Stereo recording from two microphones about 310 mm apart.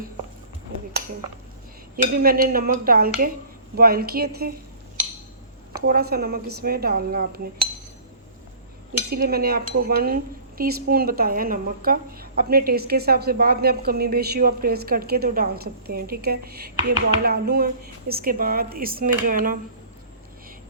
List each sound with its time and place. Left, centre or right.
2.1 s a woman's voice: right
5.8 s a woman's voice: right
9.0 s a woman's voice: right